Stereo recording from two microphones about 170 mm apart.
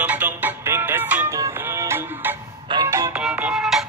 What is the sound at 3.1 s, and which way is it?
Music, 5° right (ahead or behind).